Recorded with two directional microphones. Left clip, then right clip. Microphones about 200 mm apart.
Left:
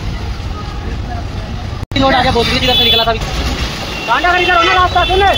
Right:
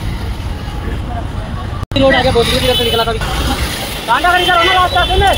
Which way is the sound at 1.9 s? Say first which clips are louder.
Right 1 dB; 55° left (ahead or behind).